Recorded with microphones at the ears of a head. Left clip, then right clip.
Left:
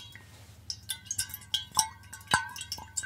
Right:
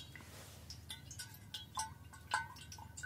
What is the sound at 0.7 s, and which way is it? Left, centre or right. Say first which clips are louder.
Music: left 16 dB; left.